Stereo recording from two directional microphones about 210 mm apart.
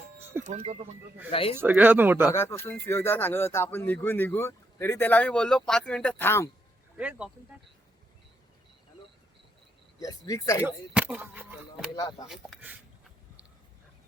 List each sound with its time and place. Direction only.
0.2 s music: 10° right (ahead or behind)
0.4 s speech: 30° right (ahead or behind)
1.3 s speech: 25° left (ahead or behind)
1.5 s speech: 10° right (ahead or behind)
2.3 s speech: 10° left (ahead or behind)
6.9 s speech: 5° right (ahead or behind)
10.0 s speech: 15° left (ahead or behind)
10.6 s speech: 10° right (ahead or behind)
11.9 s speech: 20° left (ahead or behind)
12.3 s speech: 5° right (ahead or behind)